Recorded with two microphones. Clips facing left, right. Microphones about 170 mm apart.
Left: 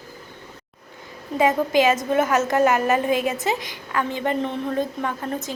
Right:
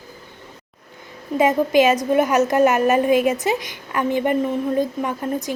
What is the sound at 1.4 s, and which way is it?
A woman's voice, 20° right (ahead or behind).